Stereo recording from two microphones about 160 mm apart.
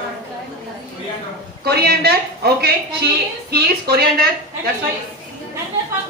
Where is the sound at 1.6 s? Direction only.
85° right.